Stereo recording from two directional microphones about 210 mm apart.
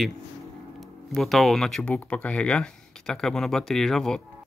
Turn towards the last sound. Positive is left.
turn(degrees=0)  # may be behind; listen again after turning